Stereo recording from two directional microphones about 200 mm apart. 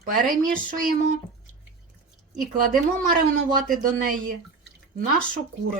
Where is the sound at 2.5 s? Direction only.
45° right (ahead or behind).